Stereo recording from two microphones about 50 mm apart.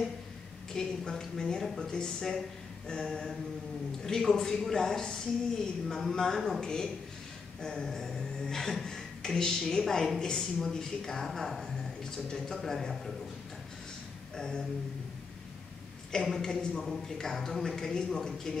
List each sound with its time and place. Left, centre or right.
0.7 s a man's voice: centre
14.3 s a sound: centre
16.3 s speech: centre